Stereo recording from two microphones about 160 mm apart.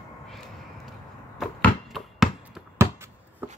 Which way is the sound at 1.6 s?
Centre (ahead or behind).